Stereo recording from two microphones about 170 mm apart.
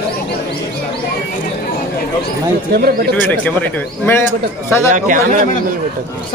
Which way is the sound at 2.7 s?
65° right (ahead or behind).